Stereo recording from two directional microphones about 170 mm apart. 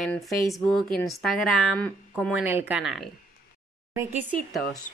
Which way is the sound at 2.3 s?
10° right (ahead or behind).